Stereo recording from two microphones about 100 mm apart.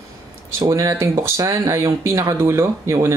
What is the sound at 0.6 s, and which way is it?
Speech, 35° right (ahead or behind).